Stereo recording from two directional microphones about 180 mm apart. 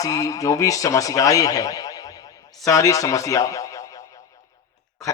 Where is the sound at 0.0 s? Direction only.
20° left (ahead or behind).